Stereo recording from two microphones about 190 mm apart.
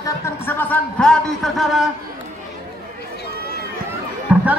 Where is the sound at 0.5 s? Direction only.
10° left (ahead or behind).